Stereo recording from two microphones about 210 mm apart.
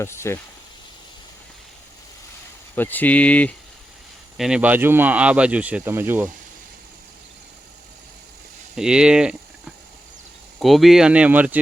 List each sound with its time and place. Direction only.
0.0 s speech: 10° left (ahead or behind)
2.7 s speech: 10° left (ahead or behind); by 6.3 s 10° right (ahead or behind)
8.7 s speech: 5° right (ahead or behind)